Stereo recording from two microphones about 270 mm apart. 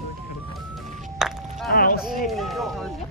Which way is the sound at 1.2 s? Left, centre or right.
Centre.